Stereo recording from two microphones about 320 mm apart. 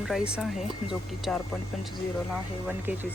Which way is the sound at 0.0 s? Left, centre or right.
Centre.